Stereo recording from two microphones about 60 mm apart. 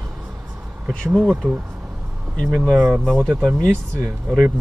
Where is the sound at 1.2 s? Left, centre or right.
Centre.